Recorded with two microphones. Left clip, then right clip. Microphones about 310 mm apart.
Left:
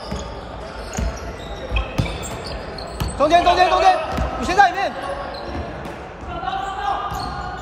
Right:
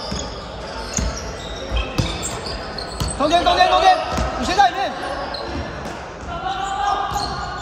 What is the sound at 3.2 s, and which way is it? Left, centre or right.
Basketball bounce, left.